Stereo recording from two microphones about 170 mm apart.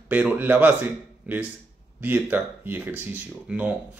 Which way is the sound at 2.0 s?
10° right (ahead or behind).